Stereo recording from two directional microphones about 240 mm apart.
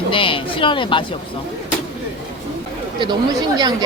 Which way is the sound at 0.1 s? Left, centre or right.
Left.